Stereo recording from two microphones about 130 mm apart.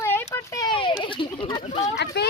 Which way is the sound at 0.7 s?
40° left (ahead or behind).